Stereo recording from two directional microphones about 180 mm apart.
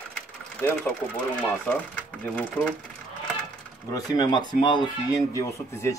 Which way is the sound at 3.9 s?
20° left (ahead or behind).